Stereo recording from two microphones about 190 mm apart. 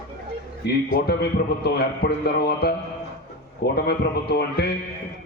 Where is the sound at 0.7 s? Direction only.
60° left (ahead or behind).